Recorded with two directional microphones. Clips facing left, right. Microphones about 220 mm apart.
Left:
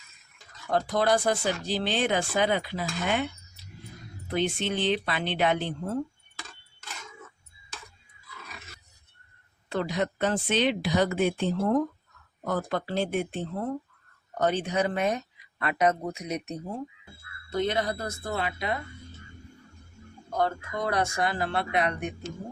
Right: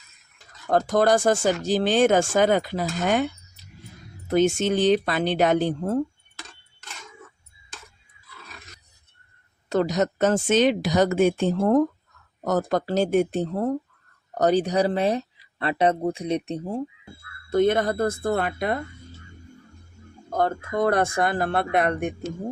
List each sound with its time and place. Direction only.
0.7 s speech: 45° right (ahead or behind)
4.3 s speech: 45° right (ahead or behind)
8.5 s roar: 5° left (ahead or behind)
9.6 s speech: 45° right (ahead or behind)
17.5 s speech: 50° right (ahead or behind)
20.3 s speech: 50° right (ahead or behind)